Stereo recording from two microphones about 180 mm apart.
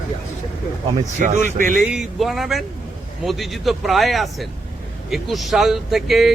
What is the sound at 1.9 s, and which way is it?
Speech, centre (ahead or behind).